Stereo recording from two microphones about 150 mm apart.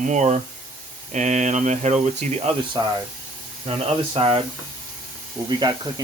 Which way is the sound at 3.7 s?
40° right (ahead or behind).